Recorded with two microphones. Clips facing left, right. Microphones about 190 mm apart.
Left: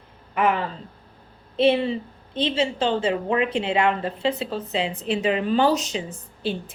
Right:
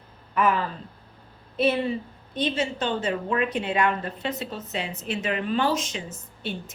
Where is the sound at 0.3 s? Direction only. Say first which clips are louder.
Left 1 dB; 25° left (ahead or behind).